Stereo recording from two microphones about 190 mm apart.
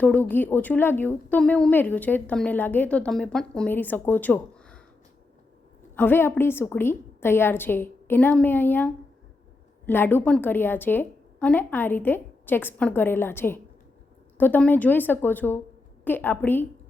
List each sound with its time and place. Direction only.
0.0 s a woman's voice: 10° left (ahead or behind)
6.0 s a woman's voice: 10° left (ahead or behind)